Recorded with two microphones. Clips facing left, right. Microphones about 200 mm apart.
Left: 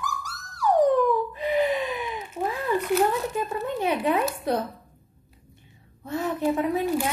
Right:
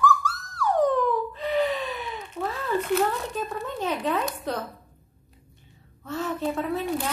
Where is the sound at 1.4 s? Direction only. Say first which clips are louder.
Left 2 dB; 10° left (ahead or behind).